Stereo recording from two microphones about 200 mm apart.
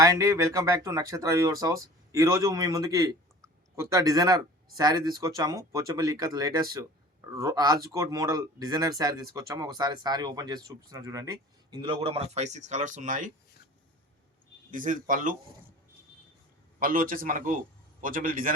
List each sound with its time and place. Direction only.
0.0 s speech: 15° right (ahead or behind); by 13.3 s 40° right (ahead or behind)
14.7 s speech: 40° right (ahead or behind)
16.8 s a man's voice: 45° right (ahead or behind)